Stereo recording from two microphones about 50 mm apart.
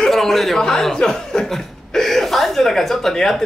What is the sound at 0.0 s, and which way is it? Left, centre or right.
Speech, centre.